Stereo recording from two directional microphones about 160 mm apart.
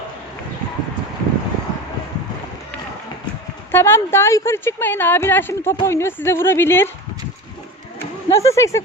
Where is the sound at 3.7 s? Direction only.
15° left (ahead or behind).